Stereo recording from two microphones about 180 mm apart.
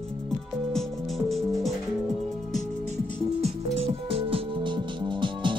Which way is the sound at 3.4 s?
35° right (ahead or behind).